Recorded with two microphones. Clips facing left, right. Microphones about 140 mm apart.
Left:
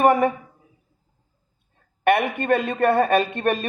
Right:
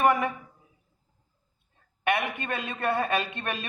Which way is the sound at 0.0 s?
45° left (ahead or behind).